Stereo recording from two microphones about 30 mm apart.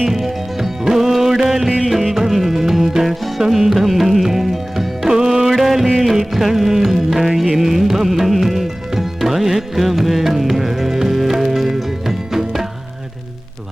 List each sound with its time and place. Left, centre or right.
0.0 s music: centre
5.0 s music: centre
5.5 s music: centre